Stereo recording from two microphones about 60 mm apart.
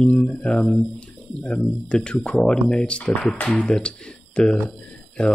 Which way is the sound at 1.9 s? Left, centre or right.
Centre.